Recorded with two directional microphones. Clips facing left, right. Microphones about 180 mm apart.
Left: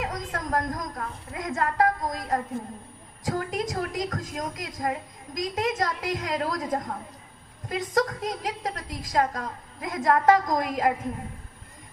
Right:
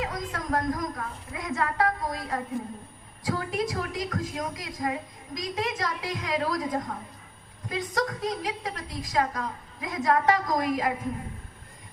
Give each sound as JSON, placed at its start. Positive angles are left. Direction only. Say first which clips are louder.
{"t": 0.0, "sound": "a woman's voice", "louder": "left 1 dB", "side_deg": 45}